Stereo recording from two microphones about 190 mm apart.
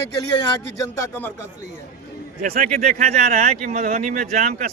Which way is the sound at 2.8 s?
35° right (ahead or behind).